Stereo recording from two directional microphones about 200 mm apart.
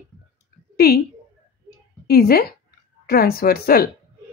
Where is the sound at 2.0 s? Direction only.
50° left (ahead or behind).